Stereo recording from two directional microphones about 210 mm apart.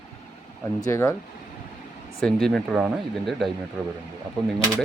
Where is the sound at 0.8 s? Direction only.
15° left (ahead or behind).